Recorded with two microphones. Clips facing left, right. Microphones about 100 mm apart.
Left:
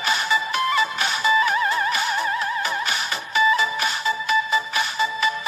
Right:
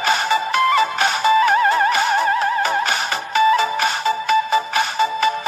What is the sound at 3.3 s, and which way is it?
Music, 70° right (ahead or behind).